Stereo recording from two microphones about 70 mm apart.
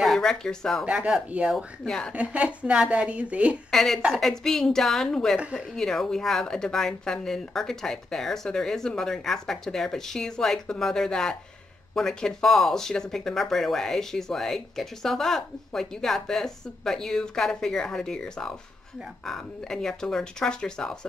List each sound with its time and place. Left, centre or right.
0.0 s speech: centre
0.8 s speech: centre
1.9 s speech: centre
2.1 s speech: centre
3.7 s a woman's voice: centre